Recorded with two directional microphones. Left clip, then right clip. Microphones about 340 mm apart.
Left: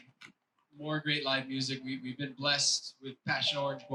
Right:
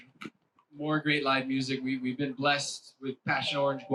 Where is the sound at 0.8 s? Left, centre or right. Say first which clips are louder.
Right 5 dB; left.